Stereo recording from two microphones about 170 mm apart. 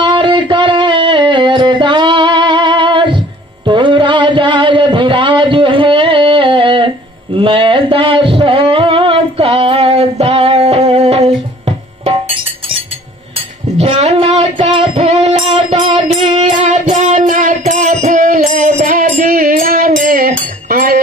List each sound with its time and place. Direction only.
0.0 s music: 30° right (ahead or behind)
7.3 s a sound: 30° right (ahead or behind)
12.0 s music: 35° right (ahead or behind)
13.7 s child singing: 40° right (ahead or behind)
14.7 s music: 40° right (ahead or behind); by 21.0 s 60° right (ahead or behind)